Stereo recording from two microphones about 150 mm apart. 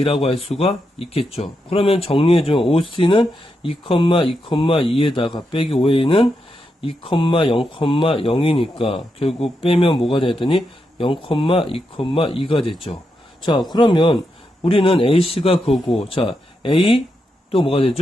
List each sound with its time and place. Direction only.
0.0 s speech: 40° left (ahead or behind)